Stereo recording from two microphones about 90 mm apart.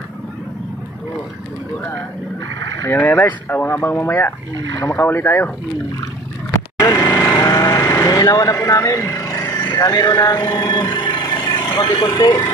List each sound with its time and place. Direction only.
2.8 s speech: 30° left (ahead or behind)
6.8 s vehicle: 45° left (ahead or behind)
7.2 s a sound: 35° left (ahead or behind); by 11.8 s 60° left (ahead or behind)
11.9 s speech: 60° left (ahead or behind)